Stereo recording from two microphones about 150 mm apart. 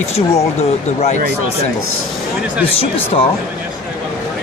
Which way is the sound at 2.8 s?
40° left (ahead or behind).